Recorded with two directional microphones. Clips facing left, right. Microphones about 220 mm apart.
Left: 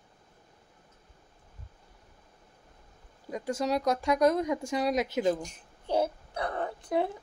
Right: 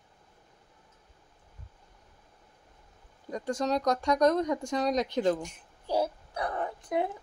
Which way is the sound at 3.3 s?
5° left (ahead or behind).